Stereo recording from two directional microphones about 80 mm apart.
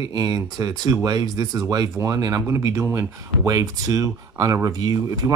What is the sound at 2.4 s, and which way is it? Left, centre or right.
Speech, right.